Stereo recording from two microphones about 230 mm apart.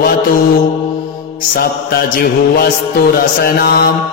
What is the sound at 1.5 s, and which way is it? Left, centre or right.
Music, left.